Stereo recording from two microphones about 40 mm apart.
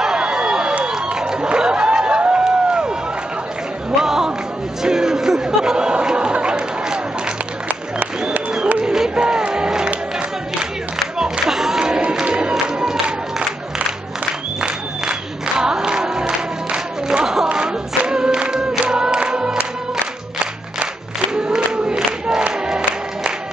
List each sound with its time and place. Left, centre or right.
0.0 s crowd: centre
1.1 s a sound: centre
4.0 s music: centre
4.8 s chatter: centre
8.7 s a sound: centre
9.1 s music: right
11.4 s a sound: centre
11.8 s crowd: centre
14.6 s music: centre
17.5 s choir: right
18.7 s music: centre
21.4 s crowd: right
22.7 s music: centre